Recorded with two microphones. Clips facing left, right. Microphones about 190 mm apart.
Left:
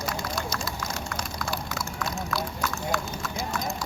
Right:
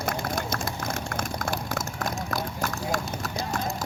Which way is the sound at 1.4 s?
45° right (ahead or behind).